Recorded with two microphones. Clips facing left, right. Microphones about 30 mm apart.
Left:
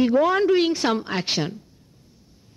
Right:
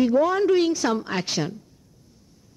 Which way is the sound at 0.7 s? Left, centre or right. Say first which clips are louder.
Left 1 dB; left.